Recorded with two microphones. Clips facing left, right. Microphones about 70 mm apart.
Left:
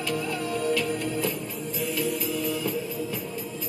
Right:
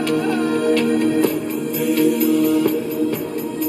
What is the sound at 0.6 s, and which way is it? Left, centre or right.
Music, right.